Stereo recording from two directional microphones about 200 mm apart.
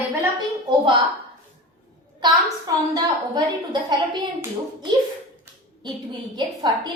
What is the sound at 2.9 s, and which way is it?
A woman's voice, 20° right (ahead or behind).